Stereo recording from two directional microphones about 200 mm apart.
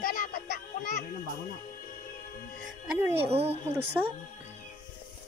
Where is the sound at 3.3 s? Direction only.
30° right (ahead or behind).